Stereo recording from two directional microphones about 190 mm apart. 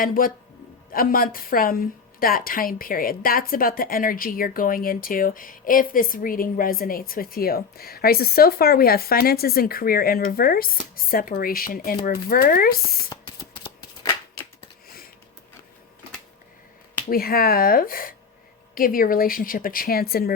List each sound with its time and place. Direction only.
0.0 s a woman's voice: 50° left (ahead or behind)
13.1 s shuffling cards: 20° left (ahead or behind)
17.1 s a woman's voice: 50° left (ahead or behind)